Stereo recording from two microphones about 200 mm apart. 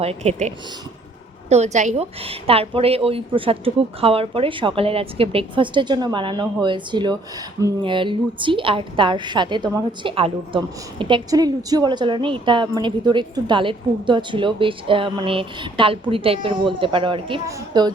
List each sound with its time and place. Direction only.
0.0 s a woman's voice: 30° right (ahead or behind)